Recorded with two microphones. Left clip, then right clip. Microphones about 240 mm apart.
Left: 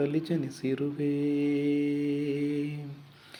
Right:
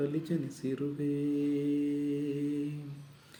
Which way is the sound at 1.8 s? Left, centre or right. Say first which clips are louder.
Left 3 dB; left.